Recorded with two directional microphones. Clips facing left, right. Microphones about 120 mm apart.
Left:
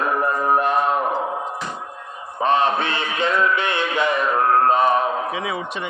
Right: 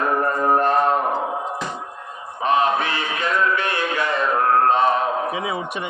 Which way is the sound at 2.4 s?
30° left (ahead or behind).